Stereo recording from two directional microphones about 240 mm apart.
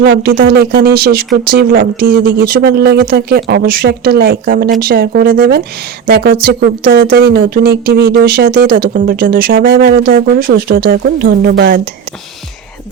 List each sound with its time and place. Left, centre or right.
0.0 s speech: right